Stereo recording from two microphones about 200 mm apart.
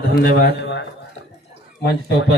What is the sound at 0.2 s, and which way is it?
Speech, 50° left (ahead or behind).